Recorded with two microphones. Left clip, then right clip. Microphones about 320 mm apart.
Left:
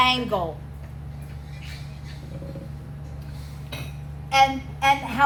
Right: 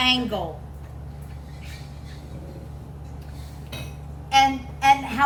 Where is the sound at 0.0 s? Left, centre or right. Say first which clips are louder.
Left 1 dB; centre.